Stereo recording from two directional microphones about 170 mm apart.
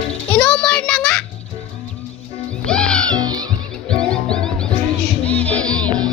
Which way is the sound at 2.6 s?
5° left (ahead or behind).